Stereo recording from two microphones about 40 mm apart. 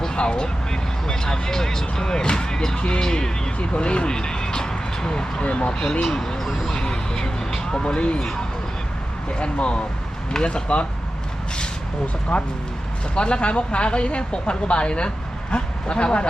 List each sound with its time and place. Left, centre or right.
0.2 s speech: left
5.4 s speech: left
6.1 s speech: centre
6.7 s a sound: centre
9.4 s speech: left
12.3 s speech: left